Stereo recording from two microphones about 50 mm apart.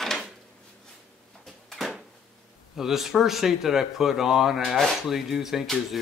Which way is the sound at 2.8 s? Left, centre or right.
Centre.